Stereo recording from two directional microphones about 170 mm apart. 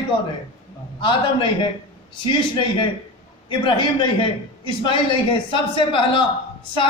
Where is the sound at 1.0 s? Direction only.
30° left (ahead or behind).